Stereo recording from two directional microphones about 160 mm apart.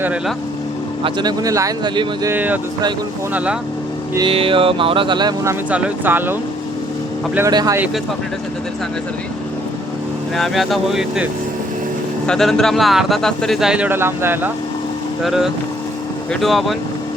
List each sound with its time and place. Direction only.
1.0 s speech: 25° right (ahead or behind)
2.3 s speech: 10° right (ahead or behind)
4.3 s music: 35° right (ahead or behind)
5.7 s speech: 10° right (ahead or behind)
7.3 s speech: 20° right (ahead or behind)
10.3 s speech: centre (ahead or behind)
15.2 s speech: centre (ahead or behind)